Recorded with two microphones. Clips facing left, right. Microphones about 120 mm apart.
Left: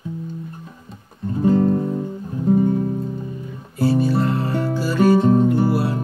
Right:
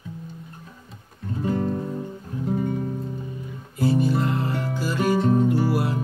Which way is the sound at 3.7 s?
20° right (ahead or behind).